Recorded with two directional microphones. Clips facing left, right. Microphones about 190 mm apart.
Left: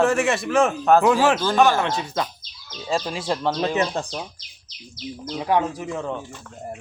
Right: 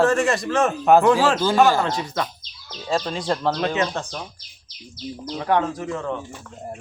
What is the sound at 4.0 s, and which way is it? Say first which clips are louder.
Speech: left 2 dB; 15° left (ahead or behind).